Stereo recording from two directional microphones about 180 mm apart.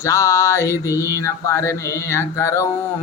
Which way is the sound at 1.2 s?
15° left (ahead or behind).